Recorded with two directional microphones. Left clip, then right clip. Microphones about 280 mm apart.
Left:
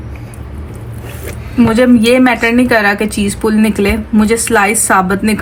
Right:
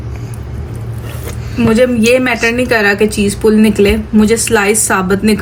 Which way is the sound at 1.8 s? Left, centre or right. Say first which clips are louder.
Left 2 dB; centre.